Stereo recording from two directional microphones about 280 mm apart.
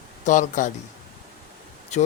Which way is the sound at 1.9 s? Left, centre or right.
Left.